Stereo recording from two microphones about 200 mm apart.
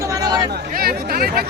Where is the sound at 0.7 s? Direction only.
50° right (ahead or behind).